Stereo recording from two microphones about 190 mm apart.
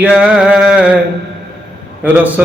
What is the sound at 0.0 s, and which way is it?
Music, 5° right (ahead or behind).